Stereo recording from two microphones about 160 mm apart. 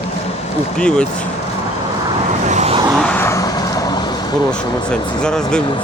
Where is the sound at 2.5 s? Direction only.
45° right (ahead or behind).